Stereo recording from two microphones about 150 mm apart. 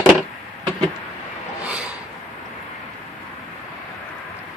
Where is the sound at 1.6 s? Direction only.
10° right (ahead or behind).